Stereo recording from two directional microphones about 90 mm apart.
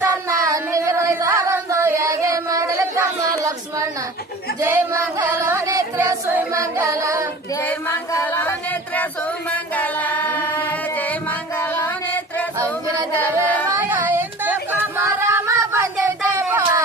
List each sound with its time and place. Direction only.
0.0 s singing: 35° right (ahead or behind)
6.5 s music: 35° right (ahead or behind)
7.9 s music: 25° left (ahead or behind)
11.5 s music: 30° left (ahead or behind)
13.1 s carnatic music: 15° left (ahead or behind)
13.7 s a sound: 20° right (ahead or behind)